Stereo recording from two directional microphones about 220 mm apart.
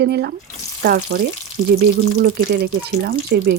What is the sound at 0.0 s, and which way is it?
Speech, 45° right (ahead or behind).